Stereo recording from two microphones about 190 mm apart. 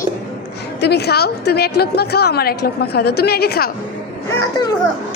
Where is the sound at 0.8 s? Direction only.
60° left (ahead or behind).